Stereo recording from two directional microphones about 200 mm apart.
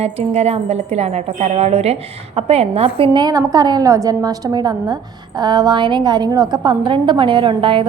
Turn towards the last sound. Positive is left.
turn(degrees=-25)  # may be behind; listen again after turning